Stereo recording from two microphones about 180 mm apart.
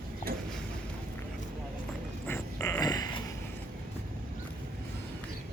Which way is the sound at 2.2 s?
15° left (ahead or behind).